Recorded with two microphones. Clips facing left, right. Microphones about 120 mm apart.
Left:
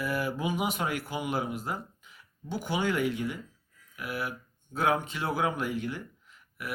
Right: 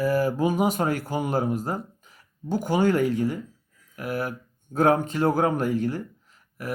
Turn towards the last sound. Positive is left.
turn(degrees=-40)  # may be behind; listen again after turning